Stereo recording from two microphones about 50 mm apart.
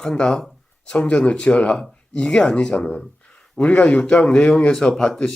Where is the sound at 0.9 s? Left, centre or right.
Left.